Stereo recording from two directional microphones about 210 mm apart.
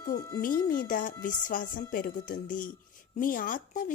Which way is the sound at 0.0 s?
15° left (ahead or behind).